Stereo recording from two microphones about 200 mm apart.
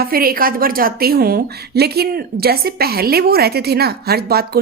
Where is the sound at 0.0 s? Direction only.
45° right (ahead or behind).